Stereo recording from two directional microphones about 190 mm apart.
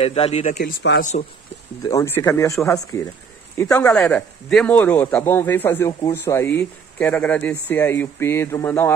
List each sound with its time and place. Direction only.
0.0 s speech: 30° left (ahead or behind)
0.6 s speech: 60° left (ahead or behind)
1.8 s speech: 15° left (ahead or behind)
4.0 s speech: 5° left (ahead or behind)